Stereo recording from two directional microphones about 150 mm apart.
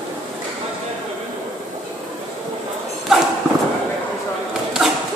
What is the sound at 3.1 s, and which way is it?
Clip-clop, 5° right (ahead or behind).